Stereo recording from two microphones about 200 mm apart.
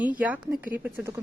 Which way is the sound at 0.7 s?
10° right (ahead or behind).